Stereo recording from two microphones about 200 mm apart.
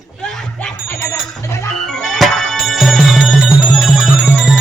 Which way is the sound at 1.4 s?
15° left (ahead or behind).